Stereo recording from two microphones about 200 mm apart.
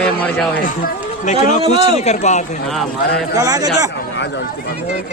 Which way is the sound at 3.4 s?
20° right (ahead or behind).